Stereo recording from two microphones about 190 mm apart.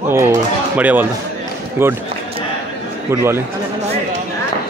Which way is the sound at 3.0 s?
15° right (ahead or behind).